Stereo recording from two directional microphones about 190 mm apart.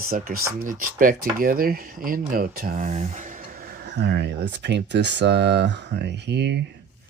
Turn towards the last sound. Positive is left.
turn(degrees=-65)  # may be behind; listen again after turning